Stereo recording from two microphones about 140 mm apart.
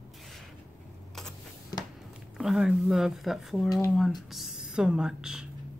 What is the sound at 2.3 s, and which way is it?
Speech, 5° right (ahead or behind).